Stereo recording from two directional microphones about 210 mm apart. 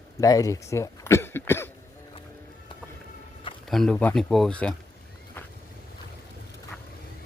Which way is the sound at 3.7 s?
5° left (ahead or behind).